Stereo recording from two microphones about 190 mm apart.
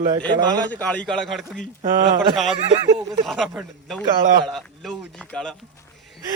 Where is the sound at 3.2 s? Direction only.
Centre (ahead or behind).